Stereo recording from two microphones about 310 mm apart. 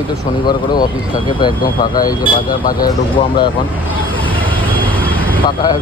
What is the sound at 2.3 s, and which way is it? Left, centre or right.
Speech, left.